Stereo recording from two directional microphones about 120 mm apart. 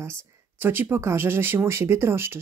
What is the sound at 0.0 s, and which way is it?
Speech, 20° right (ahead or behind).